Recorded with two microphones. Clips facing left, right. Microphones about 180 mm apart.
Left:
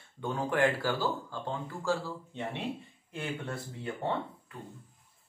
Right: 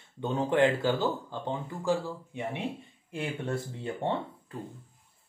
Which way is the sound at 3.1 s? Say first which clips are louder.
Right 4 dB; 25° right (ahead or behind).